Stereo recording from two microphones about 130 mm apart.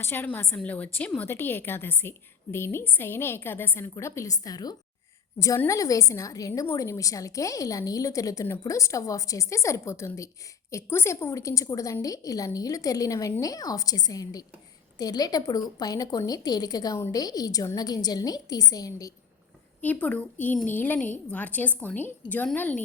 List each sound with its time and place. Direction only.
0.0 s a woman's voice: 15° left (ahead or behind)
19.8 s a woman's voice: 10° left (ahead or behind)